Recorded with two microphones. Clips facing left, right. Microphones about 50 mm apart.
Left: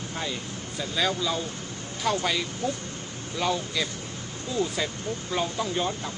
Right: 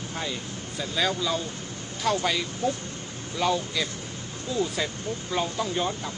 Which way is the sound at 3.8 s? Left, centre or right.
Left.